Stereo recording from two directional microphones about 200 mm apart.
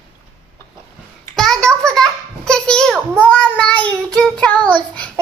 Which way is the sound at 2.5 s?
5° left (ahead or behind).